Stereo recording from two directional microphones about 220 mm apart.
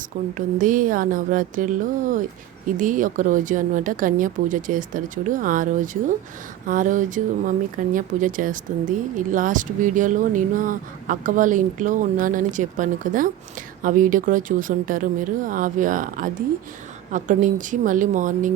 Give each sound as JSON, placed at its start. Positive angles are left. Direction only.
{"t": 0.3, "sound": "speech", "side_deg": -35}